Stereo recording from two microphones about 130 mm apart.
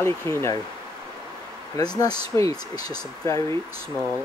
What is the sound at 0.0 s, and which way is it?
Speech, 20° left (ahead or behind).